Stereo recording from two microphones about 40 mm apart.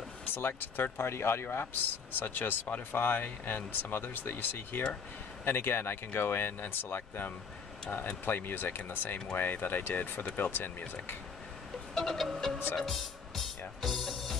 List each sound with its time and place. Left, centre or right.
0.3 s speech: left
0.9 s speech: left
11.9 s music: centre